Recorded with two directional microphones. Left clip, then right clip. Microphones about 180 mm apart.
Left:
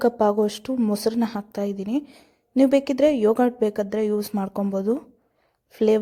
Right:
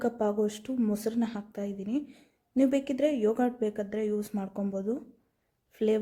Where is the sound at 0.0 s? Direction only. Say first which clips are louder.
Left 9 dB; 25° left (ahead or behind).